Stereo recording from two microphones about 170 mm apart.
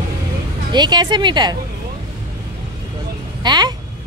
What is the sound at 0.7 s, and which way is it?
Speech, 25° right (ahead or behind).